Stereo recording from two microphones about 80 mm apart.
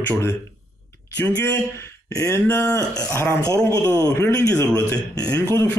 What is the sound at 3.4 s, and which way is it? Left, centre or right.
A man's voice, left.